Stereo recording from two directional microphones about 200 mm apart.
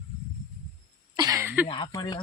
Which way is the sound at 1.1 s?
20° right (ahead or behind).